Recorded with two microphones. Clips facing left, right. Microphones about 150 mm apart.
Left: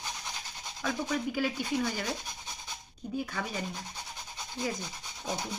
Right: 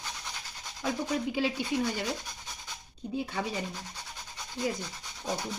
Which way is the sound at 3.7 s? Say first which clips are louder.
Left 1 dB; 15° left (ahead or behind).